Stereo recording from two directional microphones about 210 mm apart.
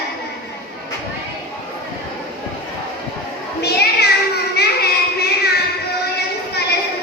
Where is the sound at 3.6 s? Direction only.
50° left (ahead or behind).